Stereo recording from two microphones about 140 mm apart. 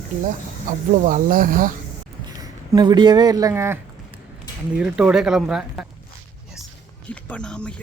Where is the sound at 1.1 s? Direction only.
80° right.